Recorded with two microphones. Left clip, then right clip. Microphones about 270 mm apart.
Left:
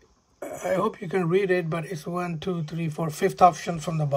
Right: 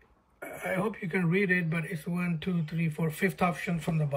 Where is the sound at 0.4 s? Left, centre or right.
Left.